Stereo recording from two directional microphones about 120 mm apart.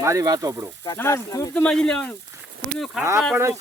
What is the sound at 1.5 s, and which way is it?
Speech, 10° left (ahead or behind).